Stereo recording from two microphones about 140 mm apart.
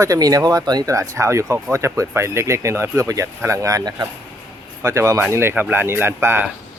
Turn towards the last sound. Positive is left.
turn(degrees=-15)  # may be behind; listen again after turning